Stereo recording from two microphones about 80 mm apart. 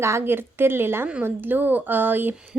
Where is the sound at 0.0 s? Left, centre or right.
Right.